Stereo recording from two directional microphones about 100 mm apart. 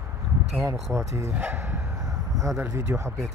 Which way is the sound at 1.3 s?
20° right (ahead or behind).